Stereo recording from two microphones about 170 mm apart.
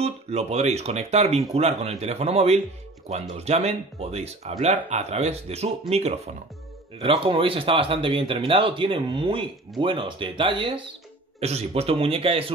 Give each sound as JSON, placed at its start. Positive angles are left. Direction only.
{"t": 0.0, "sound": "speech", "side_deg": -40}